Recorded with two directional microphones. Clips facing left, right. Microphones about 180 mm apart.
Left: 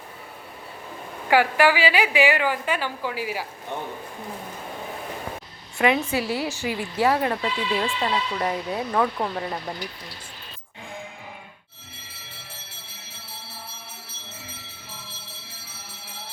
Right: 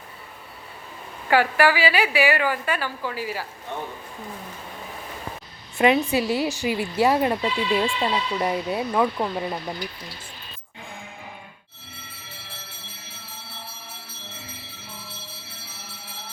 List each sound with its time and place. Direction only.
1.3 s a woman's voice: 15° left (ahead or behind)
5.7 s speech: 20° right (ahead or behind)